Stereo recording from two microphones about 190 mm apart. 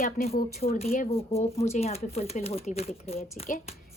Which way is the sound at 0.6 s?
35° left (ahead or behind).